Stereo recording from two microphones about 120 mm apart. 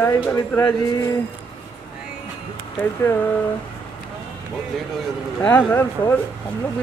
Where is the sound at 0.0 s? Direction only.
15° left (ahead or behind).